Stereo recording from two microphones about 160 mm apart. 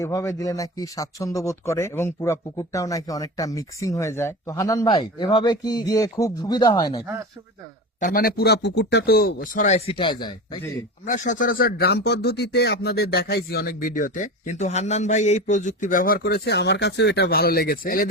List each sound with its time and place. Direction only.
0.0 s speech: 20° left (ahead or behind)
7.9 s a man's voice: 55° left (ahead or behind); by 10.6 s 30° left (ahead or behind)
11.0 s speech: 50° left (ahead or behind)